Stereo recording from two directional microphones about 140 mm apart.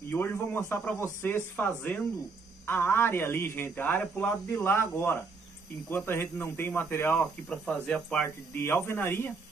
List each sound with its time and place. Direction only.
0.1 s speech: 15° left (ahead or behind)